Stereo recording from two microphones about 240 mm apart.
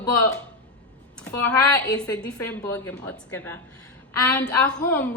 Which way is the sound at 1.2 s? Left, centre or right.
Centre.